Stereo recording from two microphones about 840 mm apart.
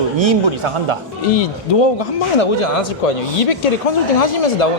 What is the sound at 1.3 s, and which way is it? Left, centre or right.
Speech, left.